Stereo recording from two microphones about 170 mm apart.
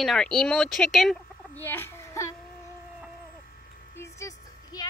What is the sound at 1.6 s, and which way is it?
Speech, 15° left (ahead or behind).